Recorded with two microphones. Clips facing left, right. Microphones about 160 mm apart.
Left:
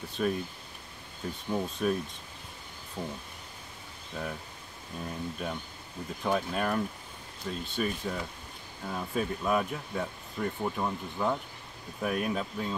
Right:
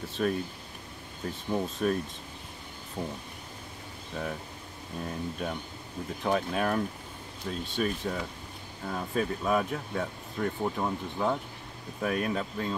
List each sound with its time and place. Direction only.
0.2 s speech: centre (ahead or behind)
1.5 s speech: centre (ahead or behind)
3.0 s speech: 20° right (ahead or behind)
5.0 s speech: centre (ahead or behind)
10.6 s speech: 5° right (ahead or behind)
12.0 s speech: 5° left (ahead or behind)